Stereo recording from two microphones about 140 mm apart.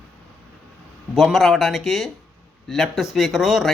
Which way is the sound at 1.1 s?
Centre (ahead or behind).